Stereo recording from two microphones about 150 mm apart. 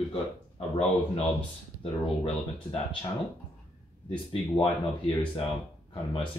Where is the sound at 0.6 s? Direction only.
45° left (ahead or behind).